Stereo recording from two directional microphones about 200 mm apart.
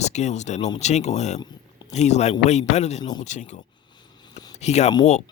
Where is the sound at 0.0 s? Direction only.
35° left (ahead or behind).